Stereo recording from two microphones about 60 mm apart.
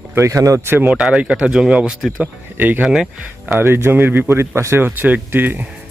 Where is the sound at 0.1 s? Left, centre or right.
Right.